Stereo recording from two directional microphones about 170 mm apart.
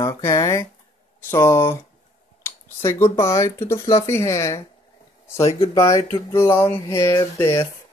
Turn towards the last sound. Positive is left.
turn(degrees=15)  # may be behind; listen again after turning